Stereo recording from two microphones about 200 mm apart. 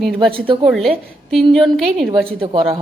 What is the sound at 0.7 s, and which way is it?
Speech, centre (ahead or behind).